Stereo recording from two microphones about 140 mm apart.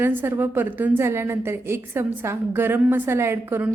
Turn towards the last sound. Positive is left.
turn(degrees=-15)  # may be behind; listen again after turning